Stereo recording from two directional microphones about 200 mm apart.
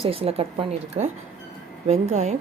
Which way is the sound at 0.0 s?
30° right (ahead or behind).